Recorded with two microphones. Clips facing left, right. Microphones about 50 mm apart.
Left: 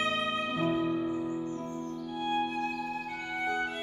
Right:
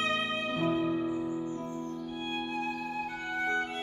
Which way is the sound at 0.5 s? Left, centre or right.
Centre.